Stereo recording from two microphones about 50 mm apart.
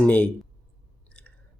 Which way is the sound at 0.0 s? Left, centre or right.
Left.